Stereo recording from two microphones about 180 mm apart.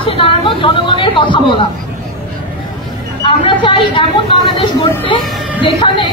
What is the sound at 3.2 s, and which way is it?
Speech, 30° left (ahead or behind).